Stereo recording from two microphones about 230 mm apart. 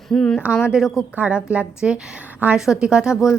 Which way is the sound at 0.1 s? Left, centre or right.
Centre.